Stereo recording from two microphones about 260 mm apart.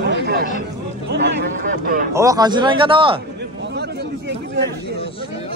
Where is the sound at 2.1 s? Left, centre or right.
Centre.